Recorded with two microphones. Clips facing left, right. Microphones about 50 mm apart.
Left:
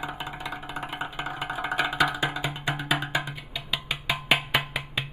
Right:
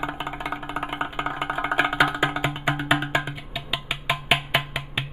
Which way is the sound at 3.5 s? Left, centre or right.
Centre.